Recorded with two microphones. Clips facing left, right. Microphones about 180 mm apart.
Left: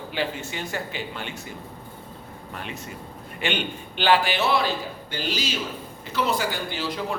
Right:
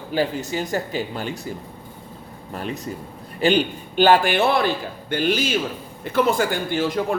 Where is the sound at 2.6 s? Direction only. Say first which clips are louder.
Right 8 dB; 40° right (ahead or behind).